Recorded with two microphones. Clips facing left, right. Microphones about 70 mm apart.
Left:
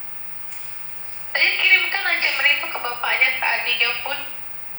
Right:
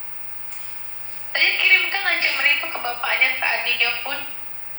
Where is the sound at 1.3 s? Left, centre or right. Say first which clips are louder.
Even; left.